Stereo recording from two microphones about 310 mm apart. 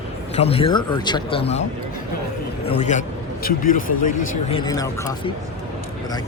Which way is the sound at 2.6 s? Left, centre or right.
Left.